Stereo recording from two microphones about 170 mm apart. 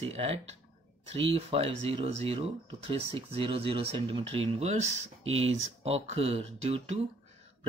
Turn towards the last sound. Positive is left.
turn(degrees=-40)  # may be behind; listen again after turning